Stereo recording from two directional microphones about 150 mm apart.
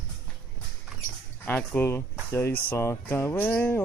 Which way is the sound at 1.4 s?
10° left (ahead or behind).